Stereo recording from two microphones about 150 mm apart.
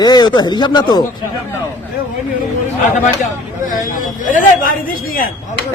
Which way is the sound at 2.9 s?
55° left (ahead or behind).